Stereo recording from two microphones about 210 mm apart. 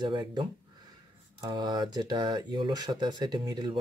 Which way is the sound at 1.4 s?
20° right (ahead or behind).